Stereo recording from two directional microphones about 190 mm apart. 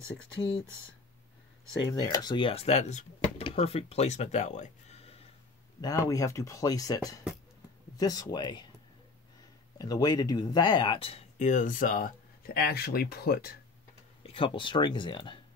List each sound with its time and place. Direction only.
1.9 s speech: 20° left (ahead or behind)
5.8 s speech: 20° left (ahead or behind)
9.8 s speech: 20° left (ahead or behind); by 13.6 s 55° left (ahead or behind)
14.2 s speech: 30° left (ahead or behind)